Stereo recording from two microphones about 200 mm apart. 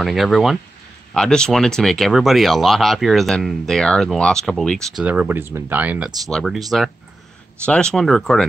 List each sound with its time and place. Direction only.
0.0 s speech: centre (ahead or behind)
7.6 s speech: 5° left (ahead or behind)